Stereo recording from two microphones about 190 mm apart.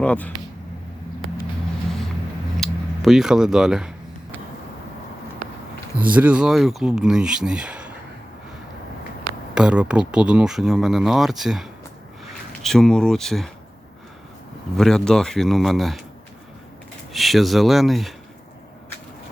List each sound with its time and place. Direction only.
0.0 s speech: 5° left (ahead or behind)
2.6 s speech: centre (ahead or behind)
6.1 s speech: 5° right (ahead or behind)
9.6 s speech: 5° right (ahead or behind)
14.8 s speech: centre (ahead or behind)
17.1 s speech: centre (ahead or behind)